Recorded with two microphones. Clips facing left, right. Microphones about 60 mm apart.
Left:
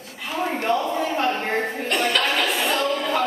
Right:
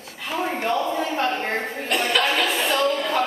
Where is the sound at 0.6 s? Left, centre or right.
Centre.